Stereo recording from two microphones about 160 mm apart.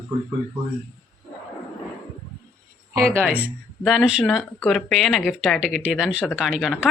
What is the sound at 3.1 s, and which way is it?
Speech, 10° right (ahead or behind).